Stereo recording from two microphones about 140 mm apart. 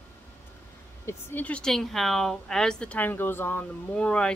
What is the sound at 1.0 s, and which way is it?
Speech, 15° left (ahead or behind).